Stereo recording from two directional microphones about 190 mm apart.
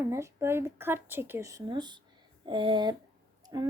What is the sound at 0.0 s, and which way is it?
A woman's voice, 15° right (ahead or behind).